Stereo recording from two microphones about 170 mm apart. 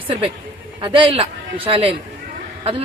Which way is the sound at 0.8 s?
30° right (ahead or behind).